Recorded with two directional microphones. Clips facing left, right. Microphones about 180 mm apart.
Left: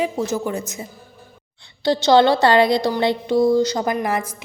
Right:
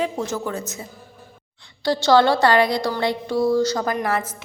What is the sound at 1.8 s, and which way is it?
A woman's voice, 20° left (ahead or behind).